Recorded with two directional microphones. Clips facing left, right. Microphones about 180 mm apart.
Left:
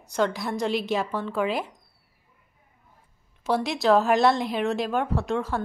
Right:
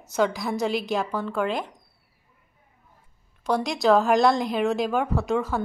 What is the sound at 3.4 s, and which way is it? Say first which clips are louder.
Speech: right 1 dB; 5° left (ahead or behind).